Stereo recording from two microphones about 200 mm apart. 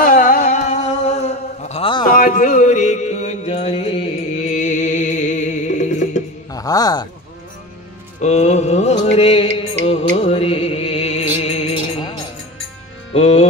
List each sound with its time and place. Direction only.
0.0 s a sound: 45° left (ahead or behind); by 2.0 s 25° left (ahead or behind)
2.1 s mantra: 45° left (ahead or behind)
6.5 s speech: 20° left (ahead or behind)
8.2 s music: 35° left (ahead or behind)
13.1 s music: 30° left (ahead or behind)